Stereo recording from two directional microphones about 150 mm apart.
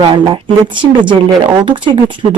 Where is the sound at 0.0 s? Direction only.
30° right (ahead or behind).